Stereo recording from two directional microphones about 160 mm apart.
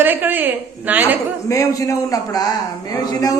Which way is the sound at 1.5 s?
20° left (ahead or behind).